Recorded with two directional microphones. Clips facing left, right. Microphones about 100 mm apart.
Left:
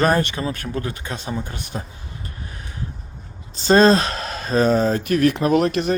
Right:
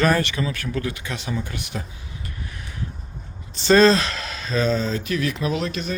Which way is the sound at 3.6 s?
40° left (ahead or behind).